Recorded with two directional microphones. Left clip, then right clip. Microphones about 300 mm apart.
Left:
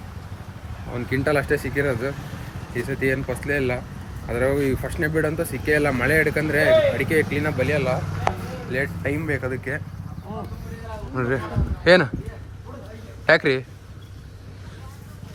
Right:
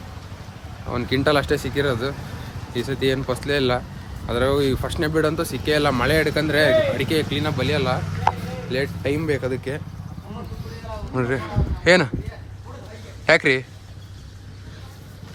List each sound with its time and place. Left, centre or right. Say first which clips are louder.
1.2 s speech: right 1 dB; centre
11.1 s speech: right 1 dB; centre
13.2 s a man's voice: right 1 dB; centre